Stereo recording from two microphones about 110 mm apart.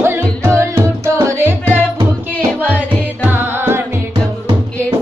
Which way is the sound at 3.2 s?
20° right (ahead or behind).